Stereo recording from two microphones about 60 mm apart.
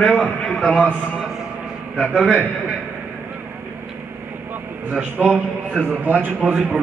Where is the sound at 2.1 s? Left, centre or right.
Centre.